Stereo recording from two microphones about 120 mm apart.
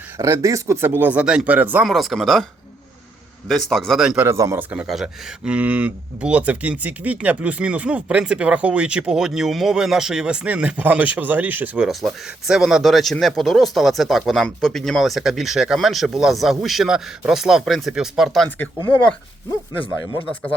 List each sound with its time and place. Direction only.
0.2 s speech: 25° right (ahead or behind)
1.8 s speech: centre (ahead or behind)
3.5 s speech: 5° left (ahead or behind)
4.2 s speech: 25° right (ahead or behind)
4.9 s speech: 5° right (ahead or behind)
11.9 s speech: 5° right (ahead or behind)